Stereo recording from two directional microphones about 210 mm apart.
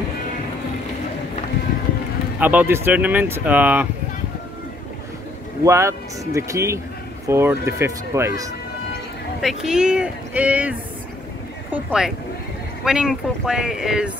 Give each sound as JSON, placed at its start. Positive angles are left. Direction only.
{"t": 2.4, "sound": "speech", "side_deg": -10}
{"t": 5.6, "sound": "speech", "side_deg": -15}
{"t": 9.4, "sound": "speech", "side_deg": 0}